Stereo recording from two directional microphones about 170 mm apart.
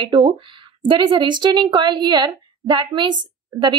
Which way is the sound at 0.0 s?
30° right (ahead or behind).